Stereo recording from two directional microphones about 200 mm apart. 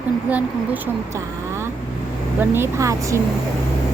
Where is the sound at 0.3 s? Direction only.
5° right (ahead or behind).